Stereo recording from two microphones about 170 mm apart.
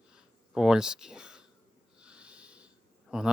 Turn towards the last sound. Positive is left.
turn(degrees=-5)  # may be behind; listen again after turning